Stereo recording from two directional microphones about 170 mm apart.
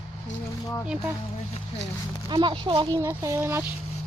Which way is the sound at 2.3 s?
30° right (ahead or behind).